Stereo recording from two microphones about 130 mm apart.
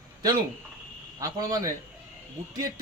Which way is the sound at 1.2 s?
25° right (ahead or behind).